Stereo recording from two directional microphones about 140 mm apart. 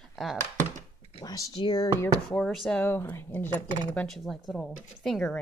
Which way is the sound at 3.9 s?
5° left (ahead or behind).